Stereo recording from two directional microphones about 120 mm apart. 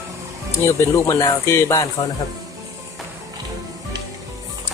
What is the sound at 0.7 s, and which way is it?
Speech, 25° left (ahead or behind).